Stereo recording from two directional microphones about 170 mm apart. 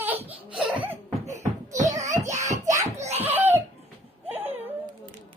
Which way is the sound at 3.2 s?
10° right (ahead or behind).